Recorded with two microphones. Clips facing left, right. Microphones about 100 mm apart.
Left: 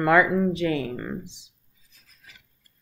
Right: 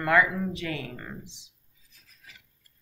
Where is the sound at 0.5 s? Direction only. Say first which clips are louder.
Left 9 dB; 10° left (ahead or behind).